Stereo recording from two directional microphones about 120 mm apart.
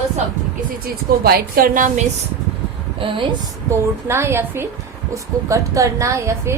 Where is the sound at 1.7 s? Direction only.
90° right.